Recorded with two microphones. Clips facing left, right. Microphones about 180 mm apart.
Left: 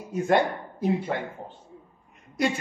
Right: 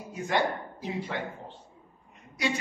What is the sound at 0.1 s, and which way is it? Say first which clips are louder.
Speech: left 6 dB; 55° left (ahead or behind).